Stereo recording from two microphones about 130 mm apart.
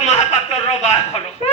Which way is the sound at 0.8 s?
55° left (ahead or behind).